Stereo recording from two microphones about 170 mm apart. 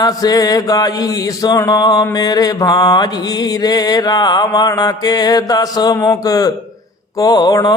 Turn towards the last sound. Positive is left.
turn(degrees=25)  # may be behind; listen again after turning